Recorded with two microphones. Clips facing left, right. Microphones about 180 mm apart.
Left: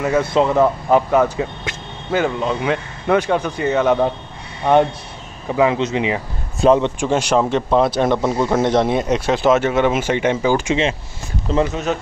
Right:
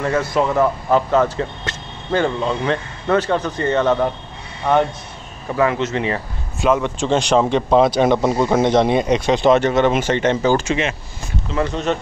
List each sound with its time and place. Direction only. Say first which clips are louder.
0.2 s speech: left 3 dB; 20° left (ahead or behind)
6.6 s speech: left 4 dB; 30° left (ahead or behind)
7.0 s speech: right 1 dB; 10° left (ahead or behind)